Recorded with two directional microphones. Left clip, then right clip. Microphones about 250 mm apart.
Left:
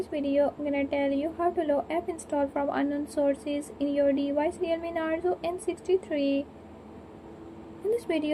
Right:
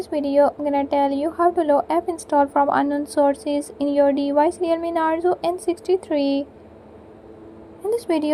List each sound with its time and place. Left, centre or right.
0.0 s a woman's voice: right
7.9 s a woman's voice: right